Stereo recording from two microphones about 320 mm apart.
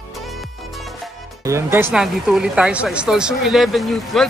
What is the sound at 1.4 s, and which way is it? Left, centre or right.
Speech, centre.